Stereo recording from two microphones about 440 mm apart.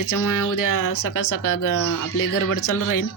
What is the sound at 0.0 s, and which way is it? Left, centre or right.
Speech, left.